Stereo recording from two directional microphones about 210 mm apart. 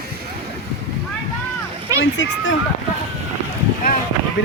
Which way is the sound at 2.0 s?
60° left (ahead or behind).